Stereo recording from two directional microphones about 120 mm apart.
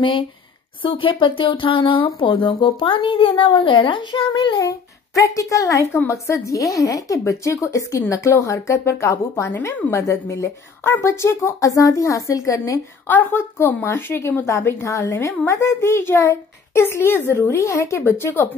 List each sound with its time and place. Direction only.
0.8 s a woman's voice: 45° left (ahead or behind); by 18.5 s 20° left (ahead or behind)